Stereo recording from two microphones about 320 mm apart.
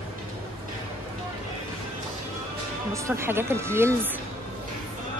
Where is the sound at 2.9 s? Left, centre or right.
Centre.